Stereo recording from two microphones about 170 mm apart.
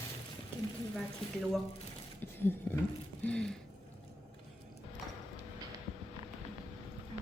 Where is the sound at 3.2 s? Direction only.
5° left (ahead or behind).